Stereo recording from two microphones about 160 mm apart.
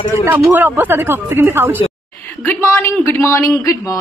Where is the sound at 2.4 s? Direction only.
15° left (ahead or behind).